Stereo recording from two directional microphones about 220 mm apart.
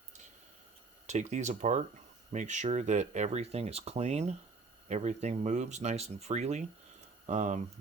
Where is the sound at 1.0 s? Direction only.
35° right (ahead or behind).